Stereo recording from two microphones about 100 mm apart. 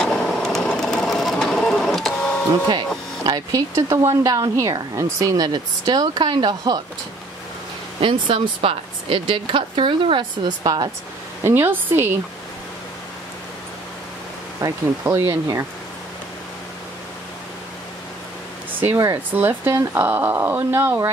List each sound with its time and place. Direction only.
0.0 s sewing machine: 5° left (ahead or behind)
3.3 s speech: 40° right (ahead or behind)
8.0 s a woman's voice: 55° right (ahead or behind)
11.4 s speech: 20° right (ahead or behind)
14.6 s speech: 35° right (ahead or behind)
19.3 s speech: 20° right (ahead or behind)